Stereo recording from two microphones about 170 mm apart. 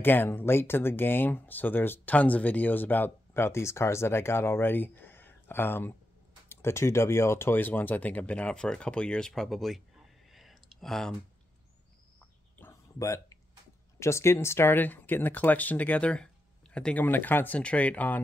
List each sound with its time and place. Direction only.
0.0 s speech: 10° left (ahead or behind)
12.5 s a sound: 15° left (ahead or behind)
13.9 s speech: 15° left (ahead or behind)